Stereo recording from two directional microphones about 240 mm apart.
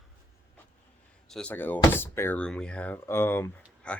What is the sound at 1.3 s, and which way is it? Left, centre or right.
Speech, centre.